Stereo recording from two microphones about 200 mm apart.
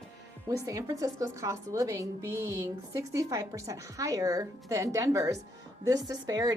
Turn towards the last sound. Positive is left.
turn(degrees=-15)  # may be behind; listen again after turning